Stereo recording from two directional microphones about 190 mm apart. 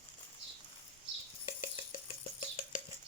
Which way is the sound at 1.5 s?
30° left (ahead or behind).